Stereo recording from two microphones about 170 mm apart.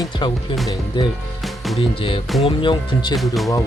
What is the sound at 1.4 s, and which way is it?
Music, centre (ahead or behind).